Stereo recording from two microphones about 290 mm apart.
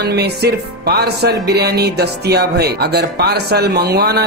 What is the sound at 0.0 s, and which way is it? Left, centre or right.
Speech, right.